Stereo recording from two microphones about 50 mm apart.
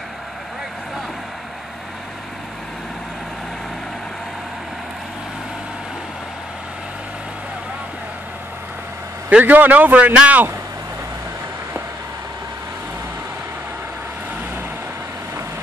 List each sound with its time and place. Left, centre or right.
9.4 s a man's voice: right